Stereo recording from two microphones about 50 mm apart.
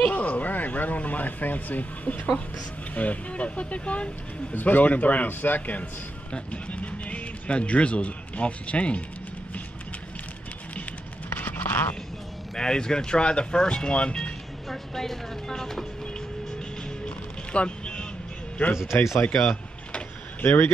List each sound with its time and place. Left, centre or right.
0.1 s speech: left
4.6 s a man's voice: left
11.2 s a sound: left
12.5 s speech: centre
14.7 s speech: centre
17.5 s music: left
18.9 s speech: left
19.3 s power windows: centre
20.4 s speech: left